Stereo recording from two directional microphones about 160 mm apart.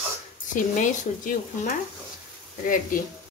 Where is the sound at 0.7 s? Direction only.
55° left (ahead or behind).